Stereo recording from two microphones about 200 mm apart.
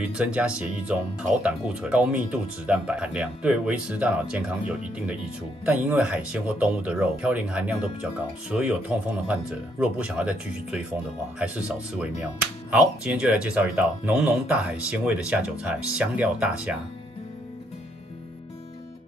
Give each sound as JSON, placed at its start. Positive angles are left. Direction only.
{"t": 0.0, "sound": "speech", "side_deg": -5}